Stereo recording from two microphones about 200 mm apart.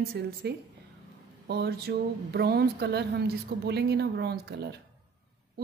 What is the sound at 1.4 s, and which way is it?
Speech, 55° right (ahead or behind).